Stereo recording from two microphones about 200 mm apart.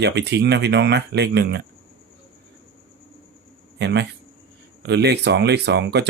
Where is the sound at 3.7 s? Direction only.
60° right (ahead or behind).